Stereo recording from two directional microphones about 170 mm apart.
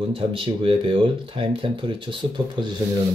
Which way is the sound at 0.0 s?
30° right (ahead or behind).